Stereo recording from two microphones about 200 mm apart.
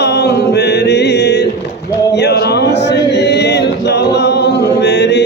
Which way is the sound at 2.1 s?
55° left (ahead or behind).